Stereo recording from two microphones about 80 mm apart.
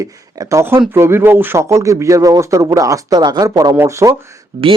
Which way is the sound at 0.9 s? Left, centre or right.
Right.